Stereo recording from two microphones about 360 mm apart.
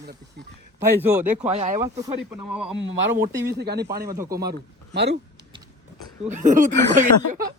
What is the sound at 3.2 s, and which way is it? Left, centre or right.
Speech, right.